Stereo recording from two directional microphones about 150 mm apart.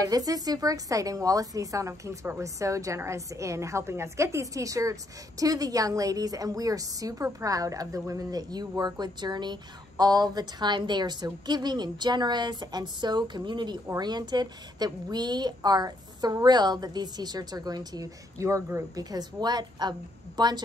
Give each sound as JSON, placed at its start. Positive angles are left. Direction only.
{"t": 0.0, "sound": "a woman's voice", "side_deg": -25}